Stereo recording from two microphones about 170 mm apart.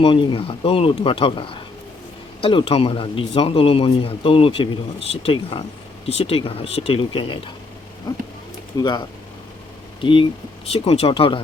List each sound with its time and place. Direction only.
0.0 s speech: 30° left (ahead or behind)
8.1 s a sound: 25° left (ahead or behind)
10.0 s speech: 30° left (ahead or behind)